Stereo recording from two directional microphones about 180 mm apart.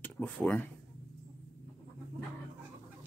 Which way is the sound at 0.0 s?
10° left (ahead or behind).